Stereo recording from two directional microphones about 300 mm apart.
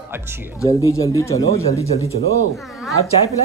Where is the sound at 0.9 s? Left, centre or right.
Centre.